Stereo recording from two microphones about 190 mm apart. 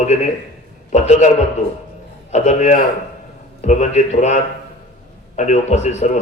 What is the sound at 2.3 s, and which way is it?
A man's voice, 40° left (ahead or behind).